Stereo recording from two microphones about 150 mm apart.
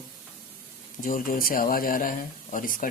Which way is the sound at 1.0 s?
65° left (ahead or behind).